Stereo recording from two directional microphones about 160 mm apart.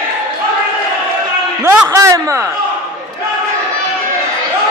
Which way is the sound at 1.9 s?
20° right (ahead or behind).